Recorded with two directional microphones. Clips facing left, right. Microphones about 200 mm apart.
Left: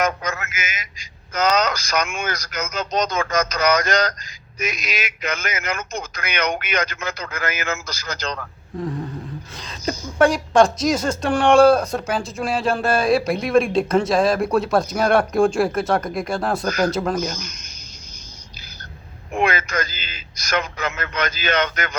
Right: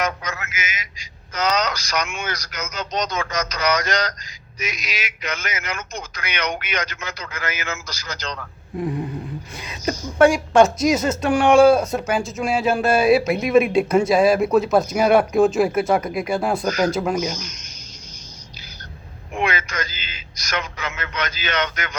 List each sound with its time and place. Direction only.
0.0 s a sound: 50° left (ahead or behind)
4.6 s a man's voice: 50° left (ahead or behind)
8.8 s speech: 15° right (ahead or behind)
10.2 s speech: 5° right (ahead or behind)
19.3 s a man's voice: 45° left (ahead or behind)